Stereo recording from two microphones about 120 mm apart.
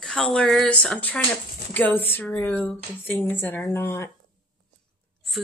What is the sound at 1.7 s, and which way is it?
Speech, 15° left (ahead or behind).